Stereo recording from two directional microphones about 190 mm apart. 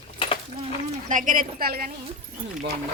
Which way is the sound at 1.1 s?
45° right (ahead or behind).